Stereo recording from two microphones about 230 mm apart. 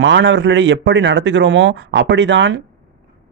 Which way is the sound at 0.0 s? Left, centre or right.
Right.